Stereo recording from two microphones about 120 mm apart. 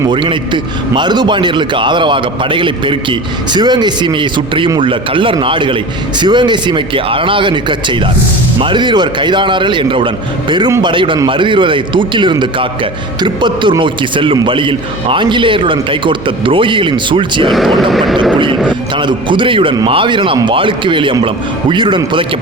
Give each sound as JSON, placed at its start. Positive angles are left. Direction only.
{"t": 0.1, "sound": "a man's voice", "side_deg": -40}
{"t": 17.9, "sound": "speech", "side_deg": 0}
{"t": 18.7, "sound": "a man's voice", "side_deg": -40}